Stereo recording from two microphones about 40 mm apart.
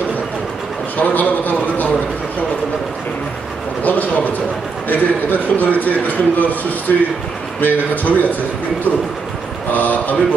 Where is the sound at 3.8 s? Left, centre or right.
Left.